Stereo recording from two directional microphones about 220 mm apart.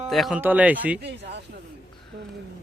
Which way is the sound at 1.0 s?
50° right (ahead or behind).